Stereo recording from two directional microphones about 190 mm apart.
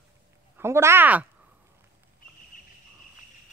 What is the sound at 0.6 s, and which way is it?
Speech, 15° right (ahead or behind).